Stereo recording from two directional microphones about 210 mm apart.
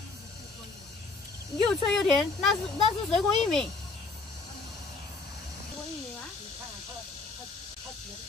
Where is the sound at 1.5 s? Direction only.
Centre (ahead or behind).